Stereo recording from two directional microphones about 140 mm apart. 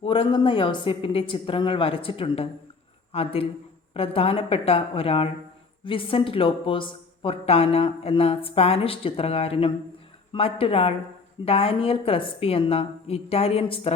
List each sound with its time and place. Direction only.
0.0 s a woman's voice: 40° left (ahead or behind)